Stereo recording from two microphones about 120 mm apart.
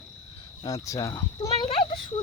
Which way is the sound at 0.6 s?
25° left (ahead or behind).